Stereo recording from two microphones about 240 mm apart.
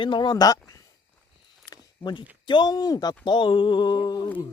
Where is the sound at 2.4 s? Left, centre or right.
Centre.